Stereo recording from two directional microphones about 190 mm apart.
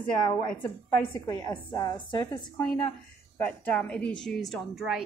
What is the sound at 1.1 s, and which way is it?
A woman's voice, 20° left (ahead or behind).